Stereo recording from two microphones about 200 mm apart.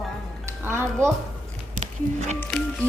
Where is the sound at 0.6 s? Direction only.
10° right (ahead or behind).